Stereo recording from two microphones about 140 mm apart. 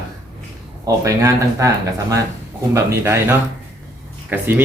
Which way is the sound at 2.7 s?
20° right (ahead or behind).